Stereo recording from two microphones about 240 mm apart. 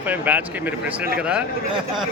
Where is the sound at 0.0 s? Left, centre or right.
Centre.